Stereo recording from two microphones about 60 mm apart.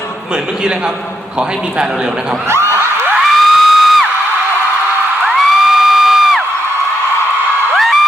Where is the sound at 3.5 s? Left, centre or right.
Centre.